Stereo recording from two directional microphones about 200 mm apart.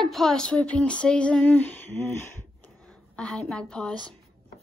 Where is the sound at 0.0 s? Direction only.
Centre (ahead or behind).